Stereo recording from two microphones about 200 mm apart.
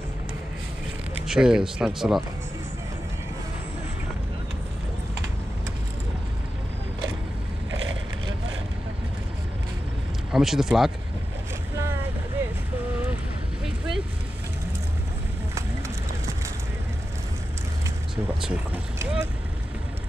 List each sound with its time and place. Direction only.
1.2 s speech: 5° right (ahead or behind)
7.8 s vehicle: 75° right (ahead or behind)
10.3 s speech: centre (ahead or behind)
18.1 s vehicle: 5° right (ahead or behind)